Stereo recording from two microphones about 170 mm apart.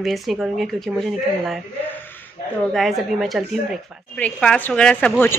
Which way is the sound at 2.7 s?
Centre (ahead or behind).